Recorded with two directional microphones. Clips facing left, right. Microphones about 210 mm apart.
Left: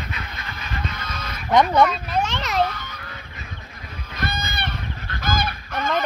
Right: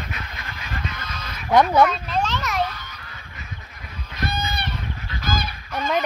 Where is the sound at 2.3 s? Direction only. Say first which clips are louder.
Left 2 dB; 30° left (ahead or behind).